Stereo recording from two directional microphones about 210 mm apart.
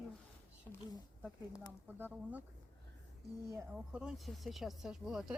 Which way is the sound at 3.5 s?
5° right (ahead or behind).